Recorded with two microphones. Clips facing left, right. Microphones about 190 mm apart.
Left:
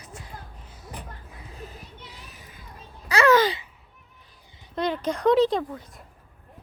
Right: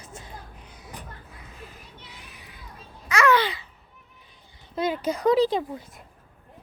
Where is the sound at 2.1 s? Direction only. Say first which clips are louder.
Left 1 dB; 40° left (ahead or behind).